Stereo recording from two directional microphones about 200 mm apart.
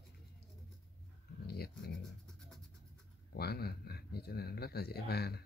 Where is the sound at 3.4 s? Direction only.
50° left (ahead or behind).